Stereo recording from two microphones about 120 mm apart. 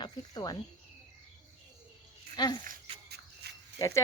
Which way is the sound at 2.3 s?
35° left (ahead or behind).